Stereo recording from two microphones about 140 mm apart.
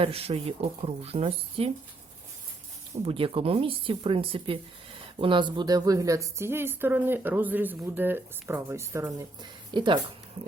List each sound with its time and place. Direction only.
0.0 s speech: 45° right (ahead or behind)
2.9 s speech: 40° right (ahead or behind)